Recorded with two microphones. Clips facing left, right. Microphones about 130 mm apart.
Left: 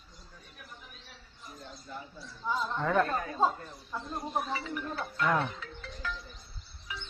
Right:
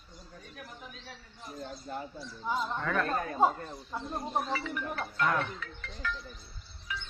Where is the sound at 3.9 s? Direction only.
15° right (ahead or behind).